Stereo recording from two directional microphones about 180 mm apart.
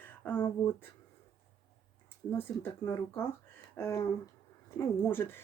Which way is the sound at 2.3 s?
10° left (ahead or behind).